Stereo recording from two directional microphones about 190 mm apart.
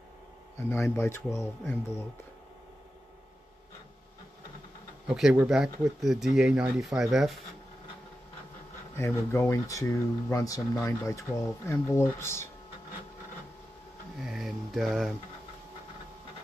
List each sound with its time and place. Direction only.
0.7 s speech: 15° left (ahead or behind)
5.0 s speech: 5° right (ahead or behind)
8.9 s speech: 15° left (ahead or behind)
14.2 s speech: centre (ahead or behind)